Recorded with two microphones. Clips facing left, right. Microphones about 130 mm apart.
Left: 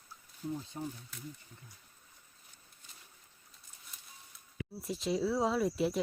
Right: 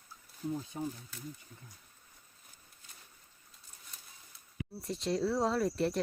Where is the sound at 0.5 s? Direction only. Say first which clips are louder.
Right 3 dB; 5° right (ahead or behind).